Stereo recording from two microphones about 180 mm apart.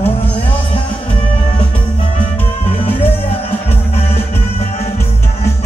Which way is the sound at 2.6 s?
35° left (ahead or behind).